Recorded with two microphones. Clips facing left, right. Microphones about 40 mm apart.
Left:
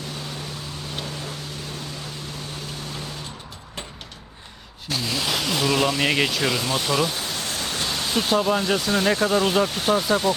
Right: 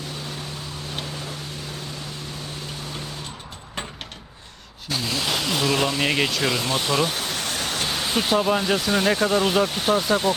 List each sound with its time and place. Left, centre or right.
4.9 s speech: centre
6.6 s speech: centre
7.1 s a sound: right
7.6 s vehicle: right
8.0 s speech: centre